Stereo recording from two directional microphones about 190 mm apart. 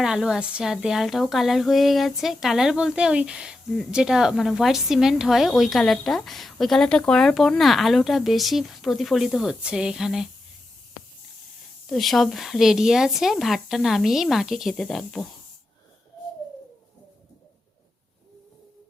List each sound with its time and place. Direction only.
0.0 s a woman's voice: 5° right (ahead or behind)
11.9 s a woman's voice: centre (ahead or behind)